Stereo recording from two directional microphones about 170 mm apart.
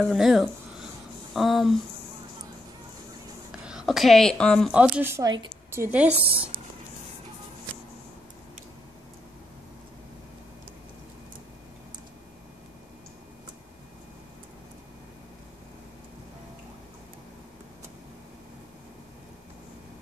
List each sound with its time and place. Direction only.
0.0 s speech: centre (ahead or behind)
3.6 s speech: 5° right (ahead or behind)
4.7 s speech: 10° right (ahead or behind)
6.3 s a woman's voice: 30° right (ahead or behind)